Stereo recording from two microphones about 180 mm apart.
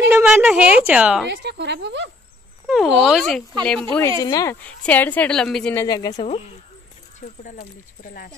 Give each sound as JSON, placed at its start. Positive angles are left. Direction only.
{"t": 0.1, "sound": "a woman's voice", "side_deg": -10}
{"t": 1.3, "sound": "a woman's voice", "side_deg": -70}
{"t": 2.6, "sound": "speech", "side_deg": 0}
{"t": 4.2, "sound": "speech", "side_deg": 20}
{"t": 4.6, "sound": "speech", "side_deg": 10}
{"t": 5.9, "sound": "speech", "side_deg": 20}
{"t": 6.1, "sound": "speech", "side_deg": 40}
{"t": 7.2, "sound": "speech", "side_deg": 50}